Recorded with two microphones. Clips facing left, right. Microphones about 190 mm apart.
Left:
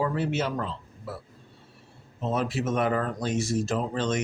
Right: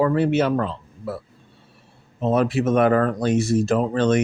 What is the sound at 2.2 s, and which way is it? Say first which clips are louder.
Speech: right 8 dB; 60° right (ahead or behind).